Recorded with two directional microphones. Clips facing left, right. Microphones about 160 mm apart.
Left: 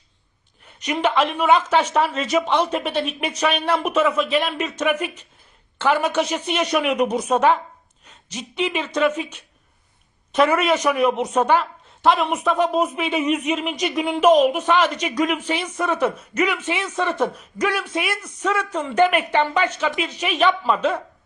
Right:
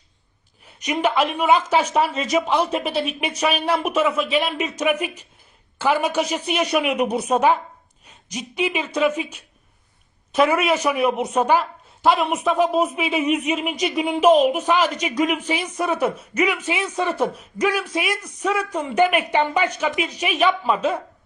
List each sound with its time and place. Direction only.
0.6 s a sound: 10° right (ahead or behind)
1.4 s speech: 5° right (ahead or behind)
3.0 s speech: 30° left (ahead or behind)
3.8 s speech: 10° right (ahead or behind)